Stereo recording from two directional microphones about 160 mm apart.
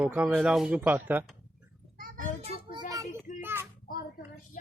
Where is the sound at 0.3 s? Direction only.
5° right (ahead or behind).